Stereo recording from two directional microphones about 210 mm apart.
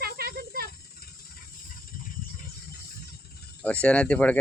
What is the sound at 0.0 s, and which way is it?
Snake, 50° right (ahead or behind).